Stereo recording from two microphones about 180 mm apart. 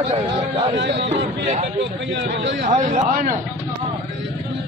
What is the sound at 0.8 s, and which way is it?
Speech, 80° right.